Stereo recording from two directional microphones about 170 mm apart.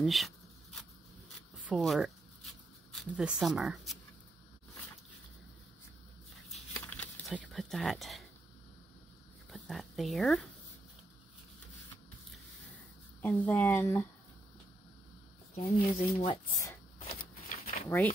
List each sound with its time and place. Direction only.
0.0 s shuffling cards: centre (ahead or behind)
1.7 s writing: centre (ahead or behind)
6.9 s a sound: 10° left (ahead or behind)
7.3 s speech: centre (ahead or behind)
9.5 s speech: centre (ahead or behind)
13.2 s speech: 10° left (ahead or behind)
15.5 s speech: 35° left (ahead or behind)
17.1 s a sound: 55° left (ahead or behind)
17.8 s speech: 15° left (ahead or behind)